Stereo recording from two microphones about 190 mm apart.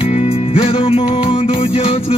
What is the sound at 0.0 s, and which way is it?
Music, 30° left (ahead or behind).